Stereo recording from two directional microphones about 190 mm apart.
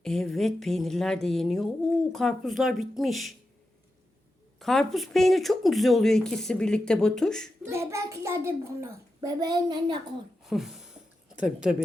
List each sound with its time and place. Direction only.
0.0 s speech: centre (ahead or behind)
4.6 s speech: centre (ahead or behind)
7.6 s a child's voice: 15° right (ahead or behind)
10.4 s speech: centre (ahead or behind)